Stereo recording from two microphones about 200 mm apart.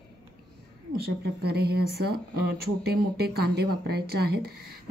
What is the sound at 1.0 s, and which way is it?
Speech, 50° right (ahead or behind).